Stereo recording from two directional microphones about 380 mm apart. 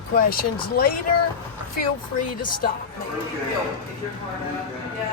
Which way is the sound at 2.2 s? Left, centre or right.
Centre.